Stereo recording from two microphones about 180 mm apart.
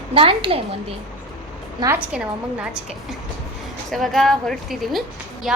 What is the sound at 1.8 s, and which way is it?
A woman's voice, 10° right (ahead or behind).